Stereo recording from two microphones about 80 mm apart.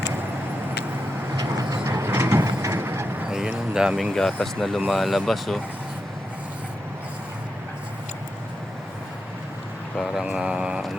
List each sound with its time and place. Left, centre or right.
1.4 s vehicle: right
3.2 s a sound: centre
3.8 s speech: centre
4.1 s speech: centre
10.0 s speech: centre